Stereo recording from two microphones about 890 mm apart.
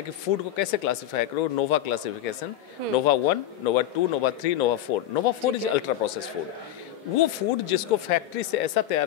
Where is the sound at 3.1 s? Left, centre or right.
Left.